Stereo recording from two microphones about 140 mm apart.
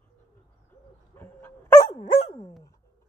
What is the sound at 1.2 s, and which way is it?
Dog, 15° left (ahead or behind).